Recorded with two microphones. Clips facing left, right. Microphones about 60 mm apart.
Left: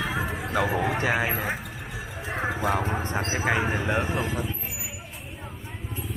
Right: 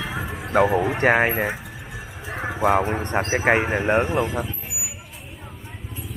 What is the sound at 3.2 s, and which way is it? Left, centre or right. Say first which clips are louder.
Speech: right 6 dB; right.